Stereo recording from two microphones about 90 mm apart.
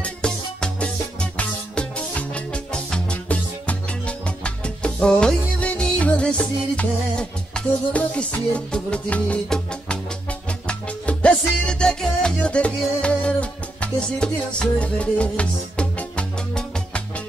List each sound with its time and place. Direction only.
0.0 s music: 10° left (ahead or behind)